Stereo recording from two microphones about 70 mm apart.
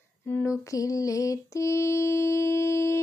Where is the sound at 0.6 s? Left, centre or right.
Left.